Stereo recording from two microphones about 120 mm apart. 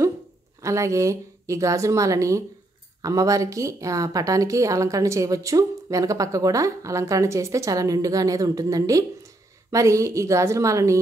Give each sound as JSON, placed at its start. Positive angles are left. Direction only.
{"t": 0.6, "sound": "a woman's voice", "side_deg": -25}